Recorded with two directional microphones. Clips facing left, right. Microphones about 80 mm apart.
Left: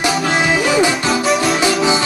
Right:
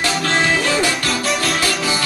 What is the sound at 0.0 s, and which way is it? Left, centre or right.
Music, centre.